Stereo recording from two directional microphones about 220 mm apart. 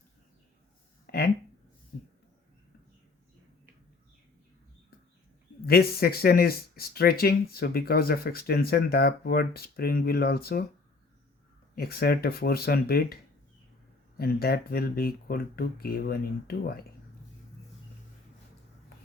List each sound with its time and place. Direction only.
1.1 s a sound: 45° left (ahead or behind)
5.6 s speech: 45° left (ahead or behind)
11.7 s speech: 45° left (ahead or behind)
14.2 s speech: 45° left (ahead or behind)